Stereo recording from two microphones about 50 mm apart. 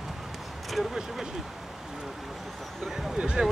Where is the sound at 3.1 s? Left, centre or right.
Centre.